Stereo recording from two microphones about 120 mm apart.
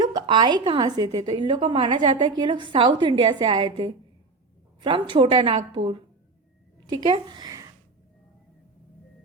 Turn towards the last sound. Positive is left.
turn(degrees=-30)  # may be behind; listen again after turning